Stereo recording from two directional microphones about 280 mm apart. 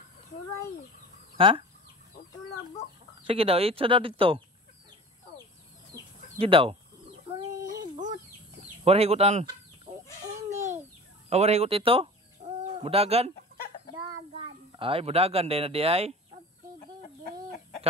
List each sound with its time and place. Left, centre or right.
1.3 s chicken: centre
3.3 s speech: right
6.3 s speech: centre
7.7 s a sound: centre
8.8 s speech: right
10.5 s babbling: centre
11.2 s speech: right
14.3 s a child's voice: centre
17.2 s chicken: left